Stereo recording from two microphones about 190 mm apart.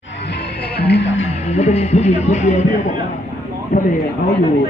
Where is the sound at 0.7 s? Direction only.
60° left (ahead or behind).